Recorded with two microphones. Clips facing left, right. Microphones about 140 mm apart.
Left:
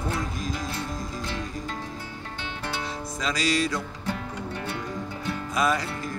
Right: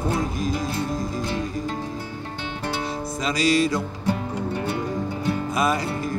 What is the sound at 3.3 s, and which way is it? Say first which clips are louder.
Music: right 5 dB; 5° right (ahead or behind).